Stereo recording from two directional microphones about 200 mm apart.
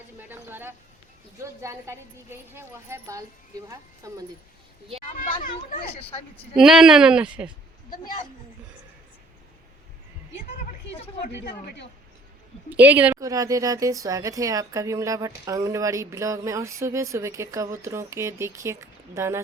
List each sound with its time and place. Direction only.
0.2 s a sound: 10° right (ahead or behind)
1.6 s speech: 15° right (ahead or behind)
5.1 s a child's voice: 40° left (ahead or behind)
6.6 s speech: 5° right (ahead or behind)
11.3 s a woman's voice: 60° left (ahead or behind)
12.7 s speech: 10° right (ahead or behind)